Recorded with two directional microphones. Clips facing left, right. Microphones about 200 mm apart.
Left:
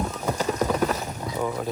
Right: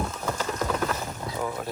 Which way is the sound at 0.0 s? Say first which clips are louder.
Left 4 dB; 15° left (ahead or behind).